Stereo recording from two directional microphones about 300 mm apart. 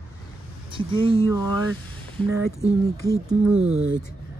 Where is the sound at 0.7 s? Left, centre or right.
Centre.